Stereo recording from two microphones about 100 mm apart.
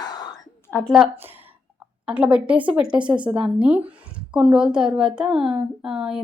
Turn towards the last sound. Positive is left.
turn(degrees=-5)  # may be behind; listen again after turning